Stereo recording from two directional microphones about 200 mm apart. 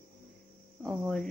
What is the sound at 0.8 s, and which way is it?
Speech, centre (ahead or behind).